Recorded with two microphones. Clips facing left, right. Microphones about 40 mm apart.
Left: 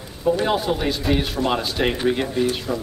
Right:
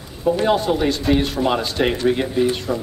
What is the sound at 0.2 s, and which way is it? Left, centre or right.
A man's voice, centre.